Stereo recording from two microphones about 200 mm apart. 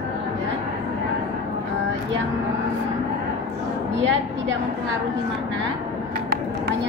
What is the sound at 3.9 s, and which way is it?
Speech, 65° right (ahead or behind).